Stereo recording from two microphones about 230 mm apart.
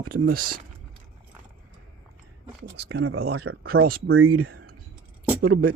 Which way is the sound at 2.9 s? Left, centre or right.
Right.